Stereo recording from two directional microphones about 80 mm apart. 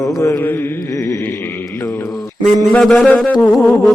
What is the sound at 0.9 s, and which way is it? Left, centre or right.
Mantra, left.